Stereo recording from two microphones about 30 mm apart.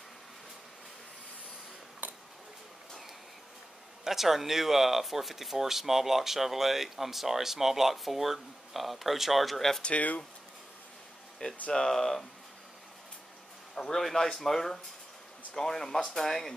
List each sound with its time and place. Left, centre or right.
2.0 s a sound: right
4.0 s speech: centre
9.9 s speech: left
11.4 s speech: left
11.7 s speech: centre
13.7 s a man's voice: centre